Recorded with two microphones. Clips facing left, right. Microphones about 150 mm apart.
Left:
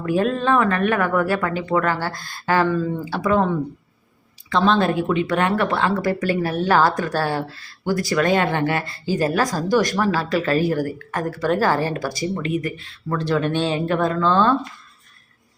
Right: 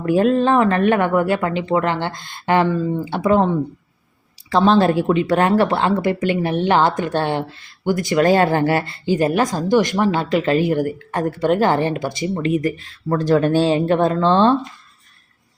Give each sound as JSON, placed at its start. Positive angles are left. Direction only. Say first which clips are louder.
{"t": 0.0, "sound": "speech", "louder": "right 5 dB", "side_deg": -30}
{"t": 5.9, "sound": "speech", "louder": "right 2 dB", "side_deg": -20}
{"t": 9.1, "sound": "speech", "louder": "right 3 dB", "side_deg": -20}